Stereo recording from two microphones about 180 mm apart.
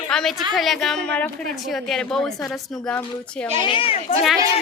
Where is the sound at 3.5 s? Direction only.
30° left (ahead or behind).